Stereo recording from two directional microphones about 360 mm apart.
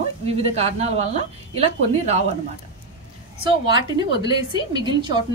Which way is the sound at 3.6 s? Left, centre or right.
Centre.